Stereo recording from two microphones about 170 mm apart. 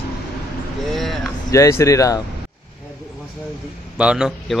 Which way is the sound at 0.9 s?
Centre (ahead or behind).